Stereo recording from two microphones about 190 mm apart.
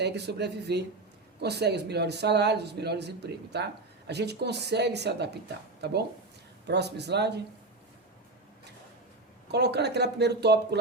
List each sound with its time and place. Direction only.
0.0 s speech: 60° right (ahead or behind)
6.7 s speech: 60° right (ahead or behind)
9.5 s speech: 60° right (ahead or behind)